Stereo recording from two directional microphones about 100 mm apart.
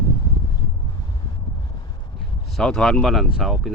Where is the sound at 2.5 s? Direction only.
5° left (ahead or behind).